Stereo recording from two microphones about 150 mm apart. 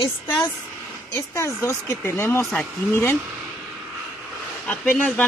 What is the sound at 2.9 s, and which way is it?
Speech, 15° left (ahead or behind).